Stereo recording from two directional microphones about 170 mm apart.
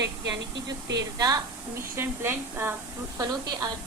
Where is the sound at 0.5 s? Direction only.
90° right.